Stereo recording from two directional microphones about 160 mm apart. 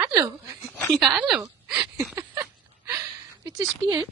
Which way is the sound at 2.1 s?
20° right (ahead or behind).